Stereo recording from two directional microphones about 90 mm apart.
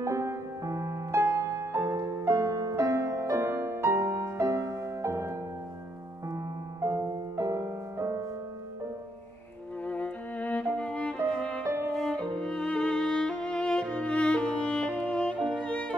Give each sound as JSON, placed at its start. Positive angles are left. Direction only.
{"t": 0.0, "sound": "music", "side_deg": -30}
{"t": 6.8, "sound": "music", "side_deg": -35}
{"t": 9.8, "sound": "music", "side_deg": 15}